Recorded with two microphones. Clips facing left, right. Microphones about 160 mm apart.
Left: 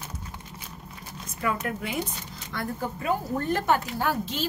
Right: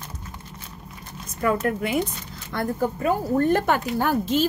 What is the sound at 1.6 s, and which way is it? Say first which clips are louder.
A woman's voice: right 7 dB; 60° right (ahead or behind).